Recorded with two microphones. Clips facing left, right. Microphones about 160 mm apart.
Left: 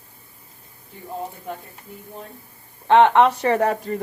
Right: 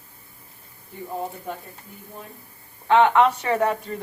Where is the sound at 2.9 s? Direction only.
30° left (ahead or behind).